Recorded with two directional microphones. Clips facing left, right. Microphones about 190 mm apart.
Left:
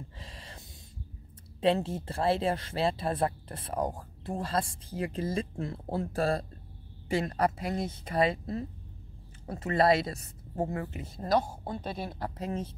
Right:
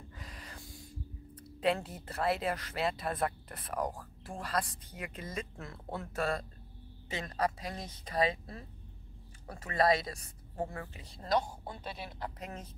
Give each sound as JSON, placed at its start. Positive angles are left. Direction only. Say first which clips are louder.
{"t": 0.2, "sound": "a sound", "louder": "left 1 dB", "side_deg": 25}
{"t": 1.6, "sound": "speech", "louder": "left 5 dB", "side_deg": 25}
{"t": 8.3, "sound": "speech", "louder": "left 6 dB", "side_deg": 40}
{"t": 9.7, "sound": "speech", "louder": "left 4 dB", "side_deg": 30}
{"t": 10.7, "sound": "speech", "louder": "left 9 dB", "side_deg": 40}